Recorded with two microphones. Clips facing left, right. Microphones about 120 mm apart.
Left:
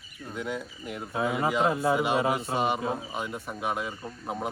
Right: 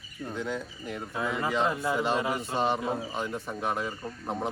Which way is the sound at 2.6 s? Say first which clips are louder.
Even; 10° left (ahead or behind).